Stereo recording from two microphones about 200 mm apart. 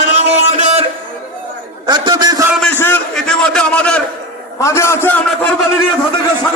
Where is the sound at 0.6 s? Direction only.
30° right (ahead or behind).